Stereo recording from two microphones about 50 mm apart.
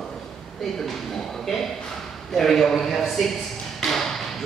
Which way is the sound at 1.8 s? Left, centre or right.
Centre.